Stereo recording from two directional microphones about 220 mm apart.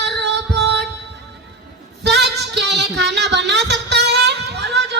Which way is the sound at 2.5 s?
50° right (ahead or behind).